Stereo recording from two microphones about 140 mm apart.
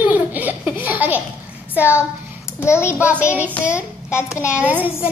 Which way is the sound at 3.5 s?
20° left (ahead or behind).